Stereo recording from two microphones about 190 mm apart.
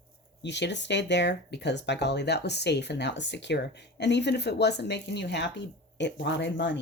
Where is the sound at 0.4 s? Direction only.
65° left (ahead or behind).